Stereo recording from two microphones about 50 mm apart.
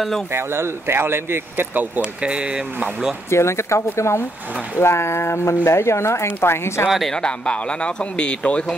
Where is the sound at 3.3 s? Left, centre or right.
Left.